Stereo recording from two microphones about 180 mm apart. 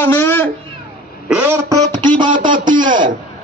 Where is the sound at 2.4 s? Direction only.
50° right (ahead or behind).